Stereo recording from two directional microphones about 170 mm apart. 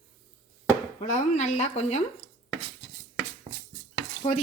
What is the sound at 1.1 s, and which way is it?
Speech, 40° left (ahead or behind).